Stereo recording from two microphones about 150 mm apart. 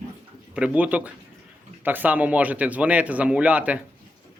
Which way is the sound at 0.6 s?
10° right (ahead or behind).